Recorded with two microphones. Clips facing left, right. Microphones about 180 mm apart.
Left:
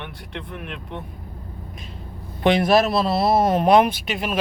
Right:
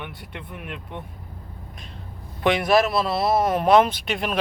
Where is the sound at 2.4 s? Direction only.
30° left (ahead or behind).